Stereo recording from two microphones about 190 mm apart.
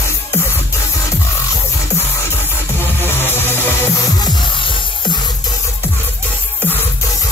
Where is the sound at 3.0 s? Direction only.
10° left (ahead or behind).